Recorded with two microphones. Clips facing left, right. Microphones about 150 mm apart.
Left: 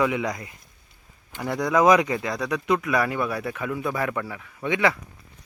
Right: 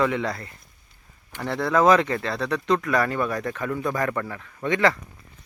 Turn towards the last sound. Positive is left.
turn(degrees=5)  # may be behind; listen again after turning